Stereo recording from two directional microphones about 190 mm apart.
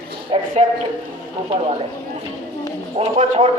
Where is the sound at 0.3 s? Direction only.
30° right (ahead or behind).